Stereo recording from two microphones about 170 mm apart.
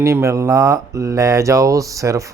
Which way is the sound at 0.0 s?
15° right (ahead or behind).